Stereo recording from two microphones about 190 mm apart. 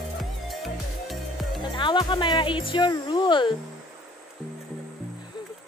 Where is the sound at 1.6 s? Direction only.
25° left (ahead or behind).